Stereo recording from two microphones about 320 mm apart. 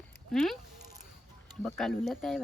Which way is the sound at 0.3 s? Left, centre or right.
Centre.